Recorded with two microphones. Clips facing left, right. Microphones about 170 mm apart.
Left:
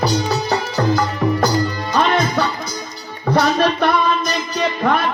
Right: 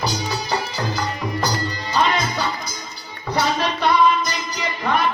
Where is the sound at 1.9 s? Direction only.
60° left (ahead or behind).